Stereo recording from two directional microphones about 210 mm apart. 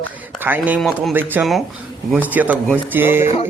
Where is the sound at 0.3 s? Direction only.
10° right (ahead or behind).